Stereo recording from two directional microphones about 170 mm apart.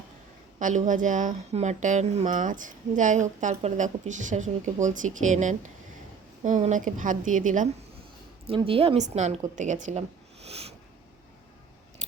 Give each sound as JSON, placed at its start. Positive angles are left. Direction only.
{"t": 0.6, "sound": "a woman's voice", "side_deg": -45}
{"t": 8.4, "sound": "a woman's voice", "side_deg": -35}
{"t": 10.4, "sound": "a sound", "side_deg": -35}